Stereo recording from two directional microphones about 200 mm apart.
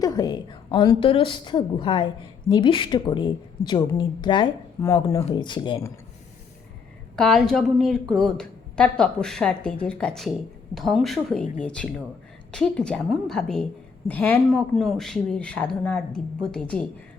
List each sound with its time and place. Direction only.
0.0 s a woman's voice: 20° left (ahead or behind)
7.2 s speech: 5° left (ahead or behind)